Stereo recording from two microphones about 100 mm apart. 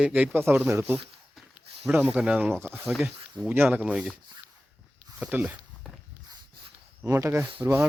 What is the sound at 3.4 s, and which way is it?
Speech, 15° right (ahead or behind).